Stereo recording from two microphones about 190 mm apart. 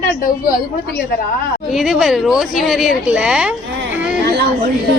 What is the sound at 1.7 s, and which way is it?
Speech, centre (ahead or behind).